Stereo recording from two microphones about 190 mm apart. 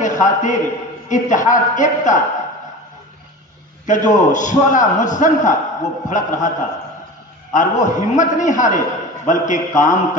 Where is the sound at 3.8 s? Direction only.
40° left (ahead or behind).